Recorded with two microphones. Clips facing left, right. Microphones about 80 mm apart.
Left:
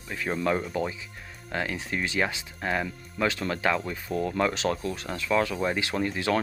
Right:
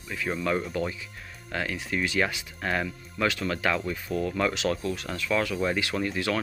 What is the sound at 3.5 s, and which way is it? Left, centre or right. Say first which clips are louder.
Speech: even; left.